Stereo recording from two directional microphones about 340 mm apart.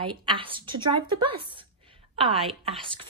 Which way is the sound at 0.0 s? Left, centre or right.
Centre.